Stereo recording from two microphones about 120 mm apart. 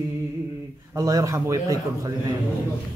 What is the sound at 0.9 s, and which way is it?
Speech, 25° right (ahead or behind).